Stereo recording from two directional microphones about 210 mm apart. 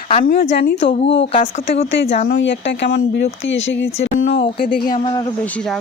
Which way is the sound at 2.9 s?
55° left (ahead or behind).